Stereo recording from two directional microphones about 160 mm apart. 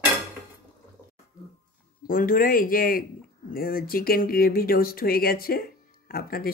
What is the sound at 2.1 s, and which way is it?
Speech, 65° left (ahead or behind).